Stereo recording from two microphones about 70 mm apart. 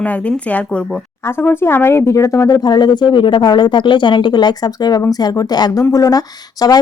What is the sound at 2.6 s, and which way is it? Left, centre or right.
Speech, left.